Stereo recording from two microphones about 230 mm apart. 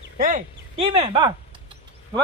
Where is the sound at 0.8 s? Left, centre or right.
Right.